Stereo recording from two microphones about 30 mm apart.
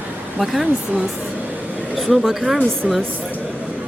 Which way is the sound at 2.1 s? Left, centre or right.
Centre.